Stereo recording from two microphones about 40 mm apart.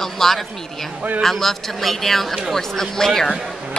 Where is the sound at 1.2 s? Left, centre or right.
Centre.